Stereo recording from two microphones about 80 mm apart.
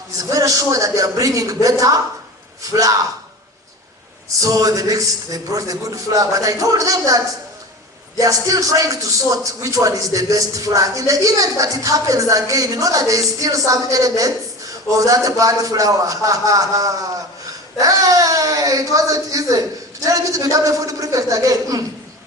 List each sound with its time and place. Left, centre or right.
0.2 s a man's voice: right
4.4 s a man's voice: right
8.2 s a man's voice: right